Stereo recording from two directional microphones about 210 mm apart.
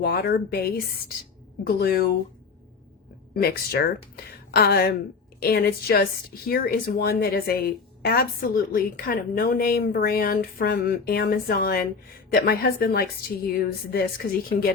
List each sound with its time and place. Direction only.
0.0 s speech: 45° left (ahead or behind)
3.3 s speech: 45° left (ahead or behind)